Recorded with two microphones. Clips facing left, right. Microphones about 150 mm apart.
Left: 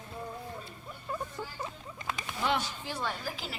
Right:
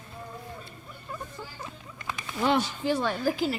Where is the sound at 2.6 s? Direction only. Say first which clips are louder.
Right 9 dB; 70° right (ahead or behind).